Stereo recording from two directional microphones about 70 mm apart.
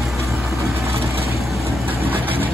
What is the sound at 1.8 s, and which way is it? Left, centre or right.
Vehicle, right.